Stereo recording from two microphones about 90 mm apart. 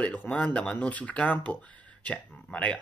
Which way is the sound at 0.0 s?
15° left (ahead or behind).